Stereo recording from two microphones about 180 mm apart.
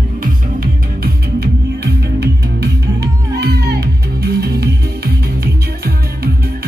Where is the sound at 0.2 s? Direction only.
55° right (ahead or behind).